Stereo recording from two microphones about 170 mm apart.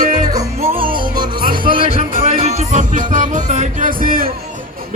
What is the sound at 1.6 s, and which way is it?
Music, 30° right (ahead or behind).